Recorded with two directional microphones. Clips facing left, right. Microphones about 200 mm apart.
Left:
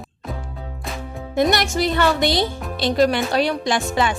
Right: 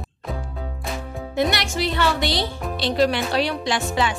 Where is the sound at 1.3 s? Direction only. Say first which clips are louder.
Left 4 dB; 45° left (ahead or behind).